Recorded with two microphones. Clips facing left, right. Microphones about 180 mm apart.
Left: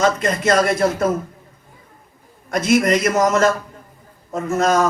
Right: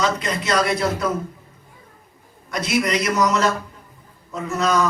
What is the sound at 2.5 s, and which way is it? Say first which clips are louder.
A man's voice: left 6 dB; 50° left (ahead or behind).